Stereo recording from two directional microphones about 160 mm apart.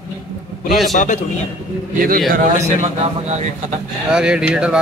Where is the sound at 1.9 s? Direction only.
65° right (ahead or behind).